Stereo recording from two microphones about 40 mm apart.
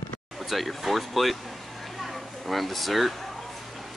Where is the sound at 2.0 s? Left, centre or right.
Centre.